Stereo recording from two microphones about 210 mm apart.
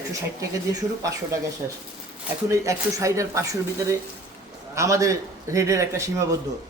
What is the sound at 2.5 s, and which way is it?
Speech, 15° right (ahead or behind).